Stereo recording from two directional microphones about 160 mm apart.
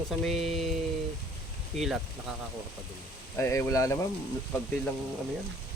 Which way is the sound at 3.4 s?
15° left (ahead or behind).